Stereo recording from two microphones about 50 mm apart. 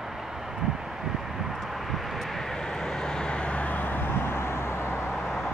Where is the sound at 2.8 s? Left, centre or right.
Centre; by 5.0 s left.